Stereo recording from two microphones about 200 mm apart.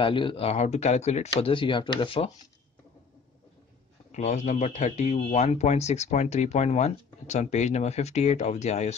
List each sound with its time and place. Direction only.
0.0 s speech: 25° left (ahead or behind)
4.1 s speech: 35° left (ahead or behind)